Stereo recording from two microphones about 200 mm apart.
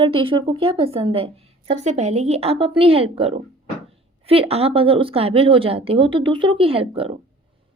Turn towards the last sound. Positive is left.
turn(degrees=-30)  # may be behind; listen again after turning